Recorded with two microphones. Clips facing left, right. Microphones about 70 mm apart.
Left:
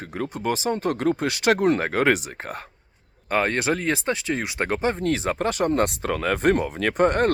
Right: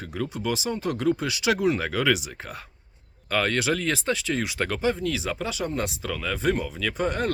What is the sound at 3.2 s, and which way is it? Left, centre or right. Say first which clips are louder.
Speech: left 2 dB; left.